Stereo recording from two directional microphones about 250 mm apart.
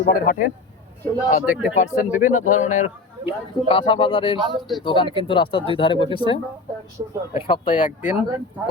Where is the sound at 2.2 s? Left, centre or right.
Left.